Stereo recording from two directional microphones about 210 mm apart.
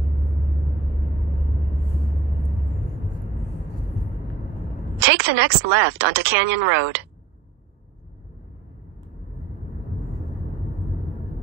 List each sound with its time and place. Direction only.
4.9 s a woman's voice: 10° right (ahead or behind)